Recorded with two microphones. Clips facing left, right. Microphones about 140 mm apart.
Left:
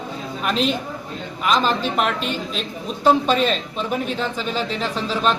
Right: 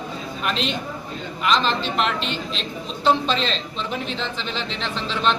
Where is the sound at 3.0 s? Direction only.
10° left (ahead or behind).